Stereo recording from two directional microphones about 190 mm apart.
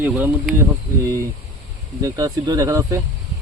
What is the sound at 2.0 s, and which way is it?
Speech, 20° right (ahead or behind).